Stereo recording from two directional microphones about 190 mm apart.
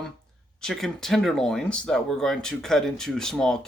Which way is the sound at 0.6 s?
Centre (ahead or behind).